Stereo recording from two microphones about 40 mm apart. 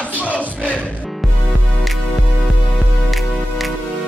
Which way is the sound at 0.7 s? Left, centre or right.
Left.